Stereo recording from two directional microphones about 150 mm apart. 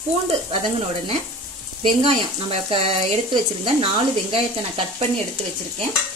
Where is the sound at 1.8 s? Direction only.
35° right (ahead or behind).